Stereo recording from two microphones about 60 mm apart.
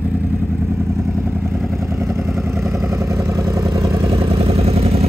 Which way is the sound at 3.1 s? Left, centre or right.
Right.